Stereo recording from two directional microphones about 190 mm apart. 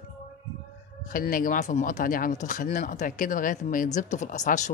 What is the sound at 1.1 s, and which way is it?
Speech, 45° left (ahead or behind).